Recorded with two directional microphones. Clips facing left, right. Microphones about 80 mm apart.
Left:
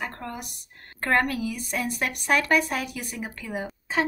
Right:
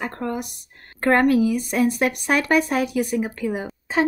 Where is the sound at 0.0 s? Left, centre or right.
Centre.